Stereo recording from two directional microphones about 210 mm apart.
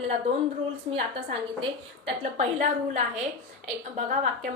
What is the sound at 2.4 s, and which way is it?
A woman's voice, 35° right (ahead or behind).